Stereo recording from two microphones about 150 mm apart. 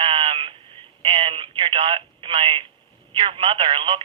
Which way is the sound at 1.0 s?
40° right (ahead or behind).